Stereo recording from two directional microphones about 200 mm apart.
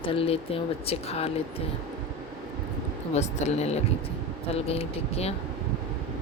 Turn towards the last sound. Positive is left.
turn(degrees=30)  # may be behind; listen again after turning